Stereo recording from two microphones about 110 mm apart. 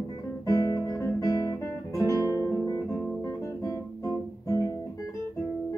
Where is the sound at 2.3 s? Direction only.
25° left (ahead or behind).